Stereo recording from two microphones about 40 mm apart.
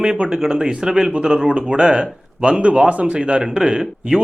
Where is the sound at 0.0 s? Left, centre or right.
Right.